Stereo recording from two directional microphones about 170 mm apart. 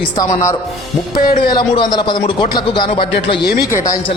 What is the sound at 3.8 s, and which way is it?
Speech, 20° left (ahead or behind).